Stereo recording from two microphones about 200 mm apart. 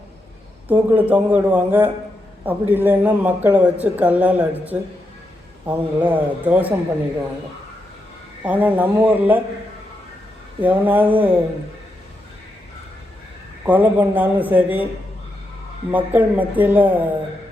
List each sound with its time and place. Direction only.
0.7 s speech: 10° right (ahead or behind)
8.4 s speech: 10° right (ahead or behind)
10.6 s speech: 10° right (ahead or behind)
13.7 s speech: 10° right (ahead or behind)
15.9 s speech: 10° right (ahead or behind)